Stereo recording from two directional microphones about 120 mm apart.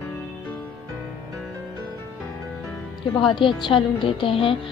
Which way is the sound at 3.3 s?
45° left (ahead or behind).